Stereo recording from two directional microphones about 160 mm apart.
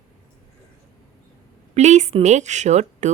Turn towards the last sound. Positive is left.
turn(degrees=-45)  # may be behind; listen again after turning